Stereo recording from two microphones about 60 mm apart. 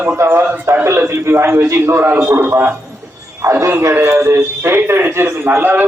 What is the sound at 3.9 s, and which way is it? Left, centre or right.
A man's voice, right.